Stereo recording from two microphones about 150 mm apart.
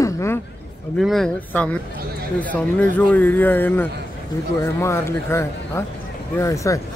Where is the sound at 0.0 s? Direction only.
20° left (ahead or behind).